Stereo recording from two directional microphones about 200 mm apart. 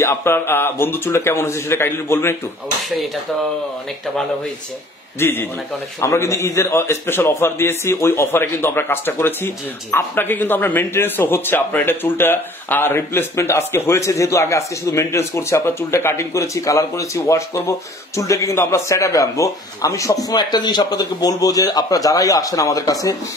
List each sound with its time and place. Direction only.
0.0 s a man's voice: 15° left (ahead or behind)
5.2 s a man's voice: 10° left (ahead or behind)